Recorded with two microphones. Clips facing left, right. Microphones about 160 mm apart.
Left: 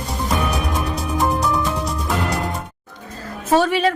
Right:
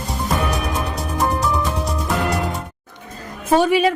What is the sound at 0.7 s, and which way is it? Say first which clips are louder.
Music: left 1 dB; centre (ahead or behind).